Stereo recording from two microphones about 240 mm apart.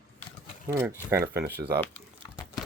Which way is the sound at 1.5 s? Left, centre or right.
Right.